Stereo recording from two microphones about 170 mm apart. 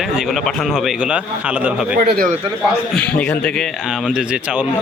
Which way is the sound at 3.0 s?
10° left (ahead or behind).